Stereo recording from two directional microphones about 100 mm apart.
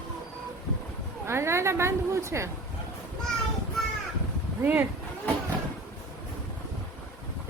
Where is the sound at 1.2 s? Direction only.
25° right (ahead or behind).